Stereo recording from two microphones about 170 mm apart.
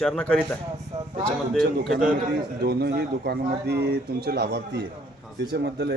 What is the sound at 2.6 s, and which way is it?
Speech, 75° right (ahead or behind).